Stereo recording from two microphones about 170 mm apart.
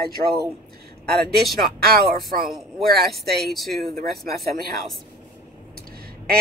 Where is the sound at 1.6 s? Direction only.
65° right (ahead or behind).